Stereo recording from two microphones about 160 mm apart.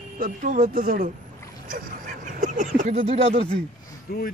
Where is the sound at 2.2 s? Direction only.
50° right (ahead or behind).